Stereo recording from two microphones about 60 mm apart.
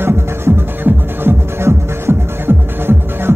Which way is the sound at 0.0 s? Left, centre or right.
Right.